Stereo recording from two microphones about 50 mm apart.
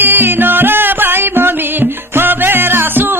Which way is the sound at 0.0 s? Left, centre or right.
Right.